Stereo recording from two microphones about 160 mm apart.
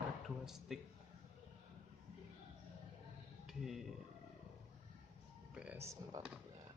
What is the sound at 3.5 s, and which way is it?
Speech, centre (ahead or behind).